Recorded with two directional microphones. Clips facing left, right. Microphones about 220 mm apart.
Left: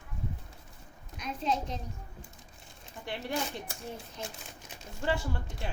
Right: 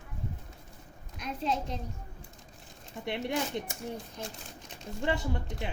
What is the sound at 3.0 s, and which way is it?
Speech, 25° right (ahead or behind).